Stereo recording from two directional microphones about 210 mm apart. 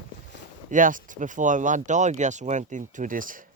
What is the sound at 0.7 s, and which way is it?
Speech, 40° right (ahead or behind).